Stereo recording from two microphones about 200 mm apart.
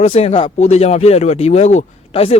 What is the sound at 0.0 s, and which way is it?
A man's voice, 30° left (ahead or behind).